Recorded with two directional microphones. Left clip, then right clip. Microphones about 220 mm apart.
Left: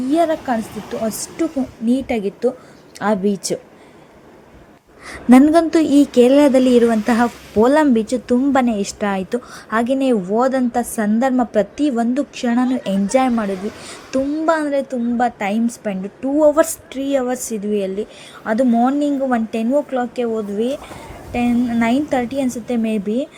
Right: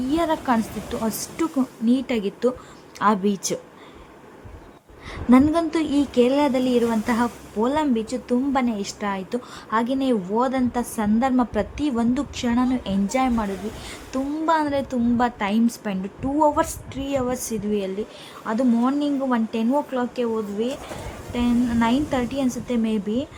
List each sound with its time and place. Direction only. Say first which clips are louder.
0.1 s a woman's voice: left 5 dB; 5° left (ahead or behind)
5.0 s a woman's voice: left 6 dB; 20° left (ahead or behind)
14.6 s a woman's voice: left 4 dB; centre (ahead or behind)